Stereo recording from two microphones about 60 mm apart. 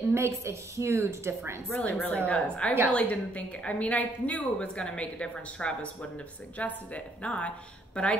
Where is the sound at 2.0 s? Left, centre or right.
Left.